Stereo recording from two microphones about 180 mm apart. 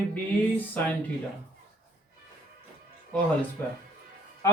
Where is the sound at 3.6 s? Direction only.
10° left (ahead or behind).